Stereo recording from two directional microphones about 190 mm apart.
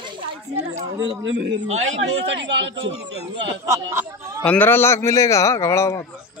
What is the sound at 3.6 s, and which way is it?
Speech, 15° right (ahead or behind).